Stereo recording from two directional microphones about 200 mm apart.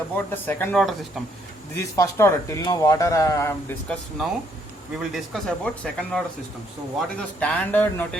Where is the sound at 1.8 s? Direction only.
15° left (ahead or behind).